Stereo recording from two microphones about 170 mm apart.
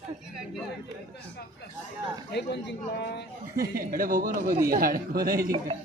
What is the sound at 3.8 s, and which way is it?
Speech, 55° right (ahead or behind).